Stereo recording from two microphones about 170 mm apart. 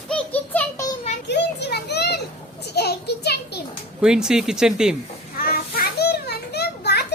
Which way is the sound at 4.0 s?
5° right (ahead or behind).